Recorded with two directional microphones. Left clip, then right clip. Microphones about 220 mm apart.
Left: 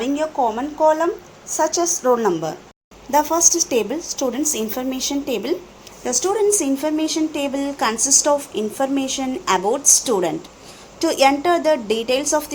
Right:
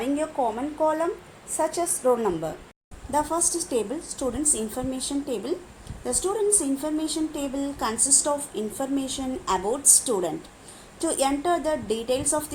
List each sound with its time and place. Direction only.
0.0 s a woman's voice: 20° left (ahead or behind)
3.1 s a woman's voice: 10° left (ahead or behind)